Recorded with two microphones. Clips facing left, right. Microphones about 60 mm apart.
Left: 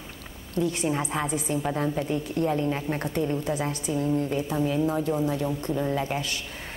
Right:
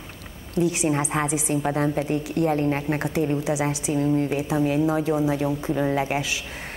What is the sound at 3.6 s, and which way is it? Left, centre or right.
Speech, right.